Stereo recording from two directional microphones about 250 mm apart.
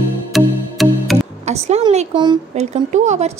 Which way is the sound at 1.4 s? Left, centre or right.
Right.